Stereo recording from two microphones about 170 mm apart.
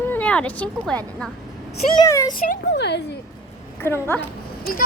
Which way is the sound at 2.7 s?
85° left.